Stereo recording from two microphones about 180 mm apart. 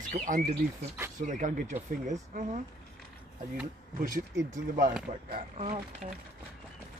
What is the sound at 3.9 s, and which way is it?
Speech, 50° right (ahead or behind).